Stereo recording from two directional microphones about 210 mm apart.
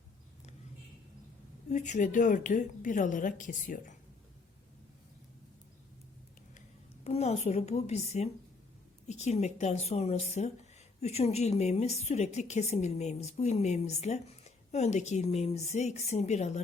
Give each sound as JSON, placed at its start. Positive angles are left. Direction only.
{"t": 1.7, "sound": "speech", "side_deg": 35}
{"t": 7.0, "sound": "speech", "side_deg": 30}